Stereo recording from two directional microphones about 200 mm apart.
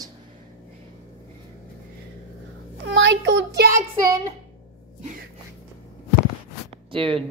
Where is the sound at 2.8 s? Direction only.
65° right (ahead or behind).